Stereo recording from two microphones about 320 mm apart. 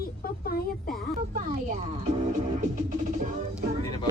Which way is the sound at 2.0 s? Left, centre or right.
Right.